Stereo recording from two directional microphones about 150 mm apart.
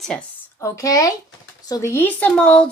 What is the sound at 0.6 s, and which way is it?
A woman's voice, 20° left (ahead or behind).